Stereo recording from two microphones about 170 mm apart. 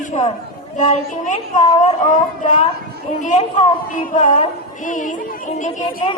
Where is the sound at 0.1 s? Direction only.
40° left (ahead or behind).